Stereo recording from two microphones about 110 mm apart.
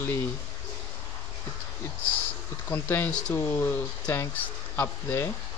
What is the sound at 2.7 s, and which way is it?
Speech, 20° left (ahead or behind).